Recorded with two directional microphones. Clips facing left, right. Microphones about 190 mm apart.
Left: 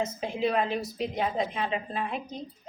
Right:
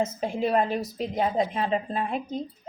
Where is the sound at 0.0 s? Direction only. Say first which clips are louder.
Right 2 dB; 45° right (ahead or behind).